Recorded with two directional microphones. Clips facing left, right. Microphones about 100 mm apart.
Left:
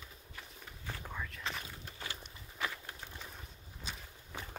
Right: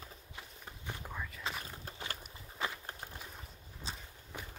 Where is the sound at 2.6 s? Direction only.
40° right (ahead or behind).